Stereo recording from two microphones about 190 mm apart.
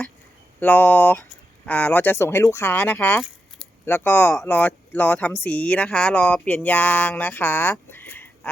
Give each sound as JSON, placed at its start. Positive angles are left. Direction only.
{"t": 0.6, "sound": "speech", "side_deg": 10}